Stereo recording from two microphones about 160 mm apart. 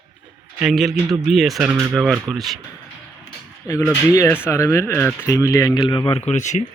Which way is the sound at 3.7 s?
15° left (ahead or behind).